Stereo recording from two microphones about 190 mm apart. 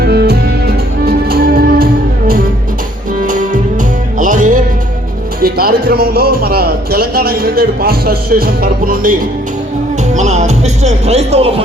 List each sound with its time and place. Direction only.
0.0 s music: 55° right (ahead or behind); by 4.6 s 40° right (ahead or behind)
5.4 s speech: 50° right (ahead or behind)
10.2 s speech: 35° right (ahead or behind)